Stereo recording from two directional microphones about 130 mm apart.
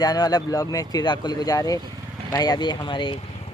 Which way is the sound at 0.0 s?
30° left (ahead or behind).